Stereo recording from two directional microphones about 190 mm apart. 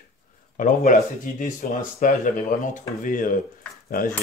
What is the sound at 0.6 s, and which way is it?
Speech, 40° left (ahead or behind).